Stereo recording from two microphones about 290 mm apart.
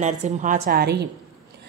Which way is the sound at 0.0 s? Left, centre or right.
Right.